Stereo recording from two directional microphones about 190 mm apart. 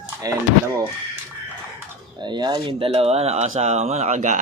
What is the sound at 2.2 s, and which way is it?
Speech, 25° right (ahead or behind).